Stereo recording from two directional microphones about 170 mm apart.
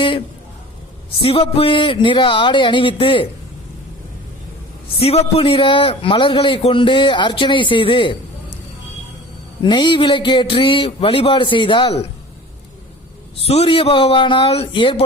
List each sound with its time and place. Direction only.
1.2 s a man's voice: 35° left (ahead or behind)
4.9 s a man's voice: 35° left (ahead or behind)
9.6 s a man's voice: 25° left (ahead or behind)
13.4 s speech: 35° left (ahead or behind)